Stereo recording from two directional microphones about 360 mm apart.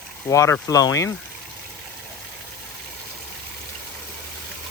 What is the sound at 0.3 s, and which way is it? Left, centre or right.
Speech, centre.